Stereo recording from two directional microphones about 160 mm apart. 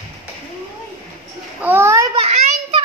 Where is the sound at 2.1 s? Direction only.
40° right (ahead or behind).